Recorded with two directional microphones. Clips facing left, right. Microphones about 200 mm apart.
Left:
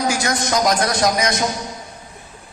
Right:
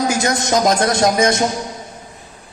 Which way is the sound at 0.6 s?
25° right (ahead or behind).